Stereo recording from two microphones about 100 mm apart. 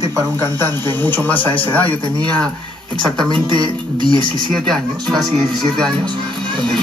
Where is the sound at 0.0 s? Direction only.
45° right (ahead or behind).